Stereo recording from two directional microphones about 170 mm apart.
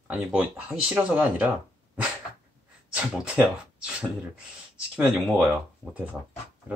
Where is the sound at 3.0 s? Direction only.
5° right (ahead or behind).